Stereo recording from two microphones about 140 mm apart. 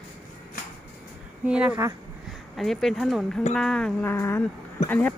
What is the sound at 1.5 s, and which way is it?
Speech, 10° right (ahead or behind).